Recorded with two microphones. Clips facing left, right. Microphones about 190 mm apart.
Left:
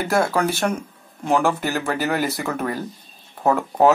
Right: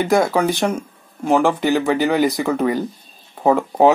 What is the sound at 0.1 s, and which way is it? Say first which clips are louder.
Speech: right 2 dB; 15° right (ahead or behind).